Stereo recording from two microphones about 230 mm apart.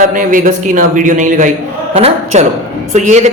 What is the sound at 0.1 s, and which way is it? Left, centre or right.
Speech, right.